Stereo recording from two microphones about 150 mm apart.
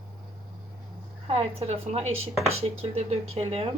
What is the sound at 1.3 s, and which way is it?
A woman's voice, 40° right (ahead or behind).